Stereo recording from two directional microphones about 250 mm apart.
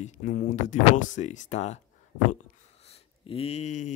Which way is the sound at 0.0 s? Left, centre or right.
Left.